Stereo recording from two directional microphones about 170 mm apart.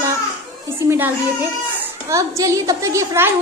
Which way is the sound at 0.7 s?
15° right (ahead or behind).